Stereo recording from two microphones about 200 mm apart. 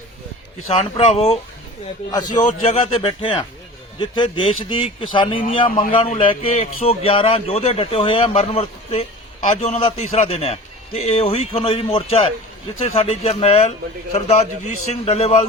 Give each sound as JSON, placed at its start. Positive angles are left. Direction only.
{"t": 0.8, "sound": "a man's voice", "side_deg": 35}
{"t": 2.1, "sound": "speech", "side_deg": 20}
{"t": 2.4, "sound": "a man's voice", "side_deg": 35}